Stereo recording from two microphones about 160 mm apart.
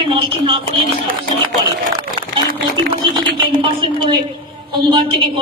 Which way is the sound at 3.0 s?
30° right (ahead or behind).